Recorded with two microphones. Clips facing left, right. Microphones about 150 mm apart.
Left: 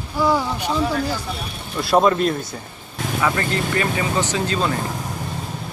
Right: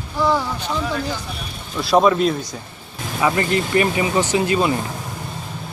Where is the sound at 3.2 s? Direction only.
20° right (ahead or behind).